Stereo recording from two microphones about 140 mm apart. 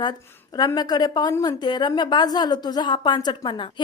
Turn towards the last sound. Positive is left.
turn(degrees=35)  # may be behind; listen again after turning